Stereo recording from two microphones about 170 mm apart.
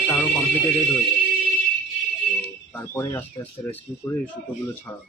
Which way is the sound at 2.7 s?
15° left (ahead or behind).